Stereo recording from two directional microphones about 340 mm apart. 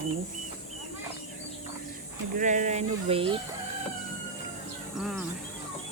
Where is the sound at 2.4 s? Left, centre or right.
Right.